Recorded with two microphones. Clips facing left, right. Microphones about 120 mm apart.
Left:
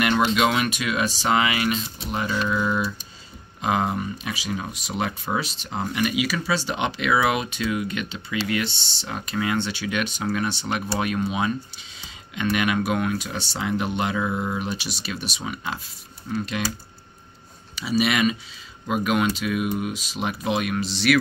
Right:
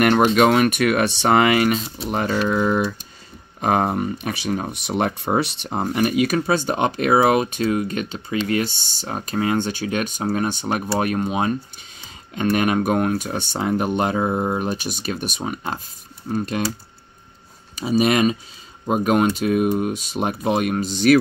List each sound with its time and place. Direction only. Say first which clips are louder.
0.0 s speech: right 5 dB; 50° right (ahead or behind)
17.7 s speech: right 4 dB; 45° right (ahead or behind)